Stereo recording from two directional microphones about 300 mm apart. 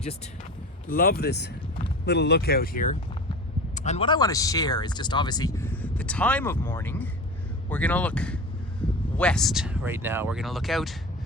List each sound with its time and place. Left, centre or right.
0.9 s speech: left; by 8.4 s centre
8.8 s a sound: centre
9.1 s speech: centre